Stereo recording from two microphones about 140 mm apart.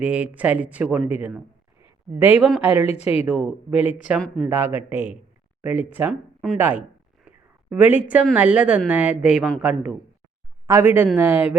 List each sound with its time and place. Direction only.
0.0 s speech: 10° right (ahead or behind)
7.3 s a sound: 10° right (ahead or behind)
8.4 s speech: 10° right (ahead or behind)
10.7 s speech: 20° right (ahead or behind)